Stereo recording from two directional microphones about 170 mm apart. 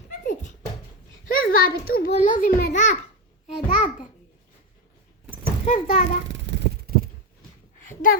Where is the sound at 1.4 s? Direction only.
60° left (ahead or behind).